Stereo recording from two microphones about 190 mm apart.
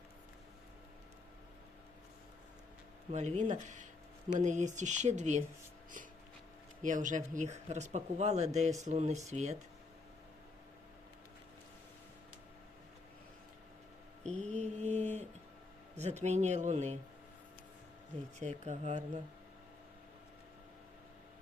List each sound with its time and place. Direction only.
3.1 s speech: 40° right (ahead or behind)
6.8 s speech: 40° right (ahead or behind)
14.3 s mantra: 40° right (ahead or behind)
16.0 s speech: 35° right (ahead or behind)
18.3 s speech: 40° right (ahead or behind)